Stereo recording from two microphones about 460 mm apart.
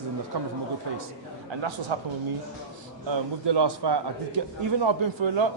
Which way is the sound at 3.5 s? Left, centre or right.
Right.